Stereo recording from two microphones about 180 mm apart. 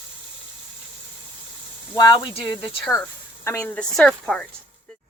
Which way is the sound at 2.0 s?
20° left (ahead or behind).